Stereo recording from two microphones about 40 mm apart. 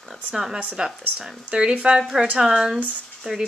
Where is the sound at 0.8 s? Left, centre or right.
Right.